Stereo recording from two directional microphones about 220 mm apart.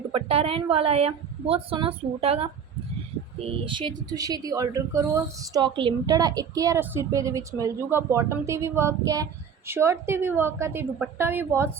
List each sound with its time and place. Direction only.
0.1 s a woman's voice: 25° right (ahead or behind); by 11.7 s 10° right (ahead or behind)